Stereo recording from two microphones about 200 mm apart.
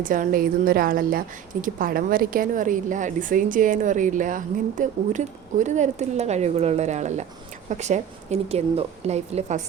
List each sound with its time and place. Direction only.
0.0 s a woman's voice: 45° right (ahead or behind)